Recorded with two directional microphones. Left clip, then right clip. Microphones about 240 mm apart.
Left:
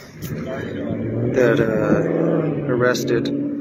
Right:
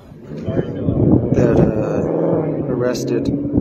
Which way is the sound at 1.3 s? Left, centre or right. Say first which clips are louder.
Right 1 dB; centre.